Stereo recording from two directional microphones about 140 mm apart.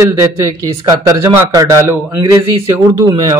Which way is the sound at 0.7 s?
20° right (ahead or behind).